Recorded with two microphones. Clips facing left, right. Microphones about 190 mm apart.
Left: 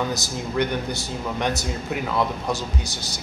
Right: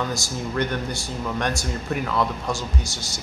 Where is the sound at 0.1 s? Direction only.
20° left (ahead or behind).